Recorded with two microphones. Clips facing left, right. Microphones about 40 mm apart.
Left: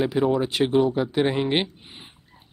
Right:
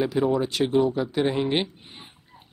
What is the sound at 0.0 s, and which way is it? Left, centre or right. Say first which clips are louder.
Speech: left 1 dB; centre.